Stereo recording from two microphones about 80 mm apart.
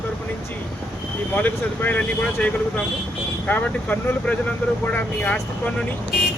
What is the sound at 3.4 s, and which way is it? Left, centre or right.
Speech, left.